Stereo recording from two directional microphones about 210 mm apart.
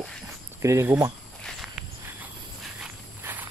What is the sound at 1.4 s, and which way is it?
Walk, centre (ahead or behind).